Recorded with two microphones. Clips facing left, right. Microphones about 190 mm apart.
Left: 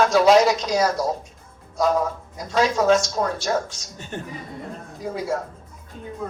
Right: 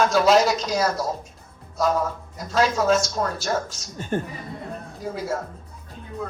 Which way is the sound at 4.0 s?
50° right (ahead or behind).